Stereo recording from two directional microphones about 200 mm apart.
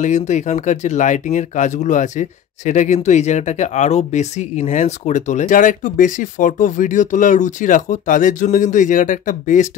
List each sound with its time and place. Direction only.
0.0 s speech: 35° left (ahead or behind)